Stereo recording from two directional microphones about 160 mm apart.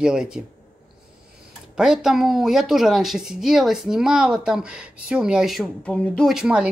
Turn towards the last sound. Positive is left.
turn(degrees=-5)  # may be behind; listen again after turning